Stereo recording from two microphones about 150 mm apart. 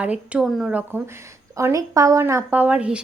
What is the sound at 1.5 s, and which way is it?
A woman's voice, 20° right (ahead or behind).